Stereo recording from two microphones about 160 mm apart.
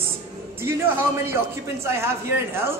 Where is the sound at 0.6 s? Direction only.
15° right (ahead or behind).